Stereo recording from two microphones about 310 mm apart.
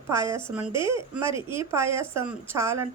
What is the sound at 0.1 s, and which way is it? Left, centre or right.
Speech, centre.